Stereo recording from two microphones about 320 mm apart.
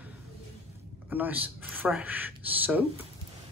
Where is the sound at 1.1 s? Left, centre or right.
Centre.